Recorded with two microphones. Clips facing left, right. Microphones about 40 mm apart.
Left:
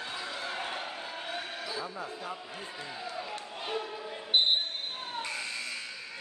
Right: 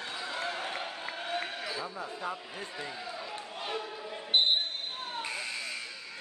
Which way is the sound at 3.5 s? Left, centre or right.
Centre.